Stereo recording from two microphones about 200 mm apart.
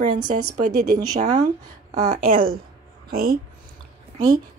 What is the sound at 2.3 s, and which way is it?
Speech, 45° right (ahead or behind).